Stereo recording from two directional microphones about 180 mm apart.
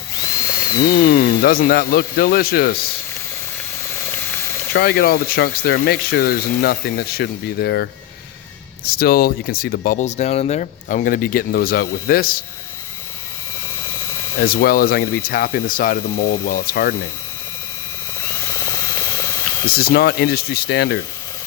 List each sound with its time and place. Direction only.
0.9 s speech: 55° left (ahead or behind)
4.7 s speech: 65° left (ahead or behind)
14.3 s speech: 55° left (ahead or behind)
18.5 s a sound: 15° left (ahead or behind)
19.7 s speech: 55° left (ahead or behind)